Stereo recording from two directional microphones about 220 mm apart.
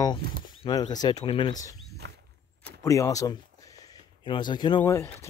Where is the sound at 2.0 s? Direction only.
50° right (ahead or behind).